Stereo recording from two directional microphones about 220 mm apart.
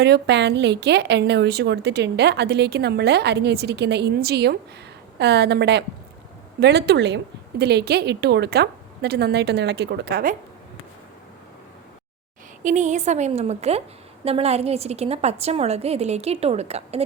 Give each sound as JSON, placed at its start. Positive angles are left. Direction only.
{"t": 0.0, "sound": "a woman's voice", "side_deg": -50}
{"t": 12.6, "sound": "a woman's voice", "side_deg": -35}